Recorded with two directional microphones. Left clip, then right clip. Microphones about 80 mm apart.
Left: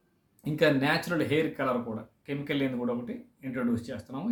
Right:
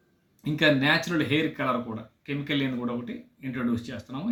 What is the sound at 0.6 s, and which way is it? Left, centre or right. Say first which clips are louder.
Speech: right 3 dB; left.